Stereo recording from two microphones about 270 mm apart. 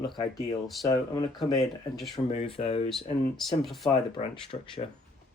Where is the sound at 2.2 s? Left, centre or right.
Left.